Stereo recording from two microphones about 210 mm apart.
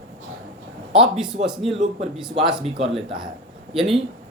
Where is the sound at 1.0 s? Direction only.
5° right (ahead or behind).